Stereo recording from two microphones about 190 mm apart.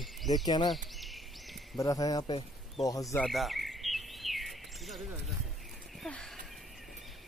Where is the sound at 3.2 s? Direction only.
Centre (ahead or behind).